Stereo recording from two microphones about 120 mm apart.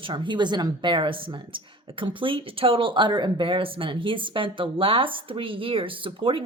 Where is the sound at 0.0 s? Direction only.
40° right (ahead or behind).